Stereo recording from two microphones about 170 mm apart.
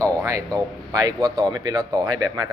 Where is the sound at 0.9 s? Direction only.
20° right (ahead or behind).